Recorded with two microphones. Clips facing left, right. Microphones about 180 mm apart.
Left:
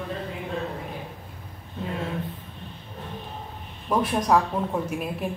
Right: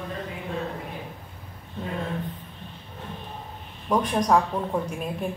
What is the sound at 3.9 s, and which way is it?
Speech, 5° left (ahead or behind).